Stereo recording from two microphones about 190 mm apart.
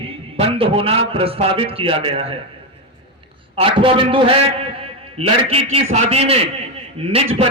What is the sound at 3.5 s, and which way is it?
A man's voice, 30° right (ahead or behind).